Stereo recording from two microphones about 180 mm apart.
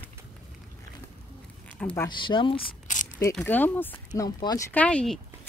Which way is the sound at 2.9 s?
45° left (ahead or behind).